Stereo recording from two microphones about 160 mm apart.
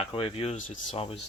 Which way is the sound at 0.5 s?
55° left (ahead or behind).